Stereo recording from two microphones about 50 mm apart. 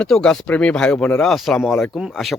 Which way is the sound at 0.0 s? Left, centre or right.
Centre.